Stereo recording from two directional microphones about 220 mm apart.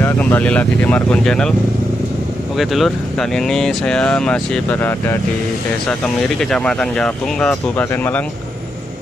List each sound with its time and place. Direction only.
0.0 s speech: 10° left (ahead or behind)
2.5 s speech: centre (ahead or behind)
6.5 s speech: 5° left (ahead or behind)